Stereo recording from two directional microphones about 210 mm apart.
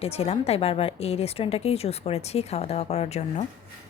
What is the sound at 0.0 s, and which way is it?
Speech, 30° left (ahead or behind).